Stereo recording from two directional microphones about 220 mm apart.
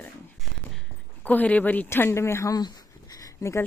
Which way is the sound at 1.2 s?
5° left (ahead or behind).